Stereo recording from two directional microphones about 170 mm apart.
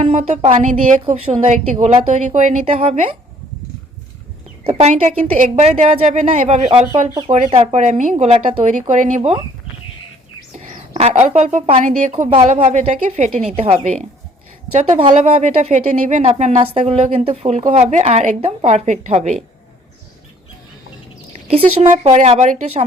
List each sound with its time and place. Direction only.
0.0 s speech: 40° right (ahead or behind)
4.7 s speech: 40° right (ahead or behind)
10.5 s speech: 40° right (ahead or behind)
21.4 s speech: 35° right (ahead or behind)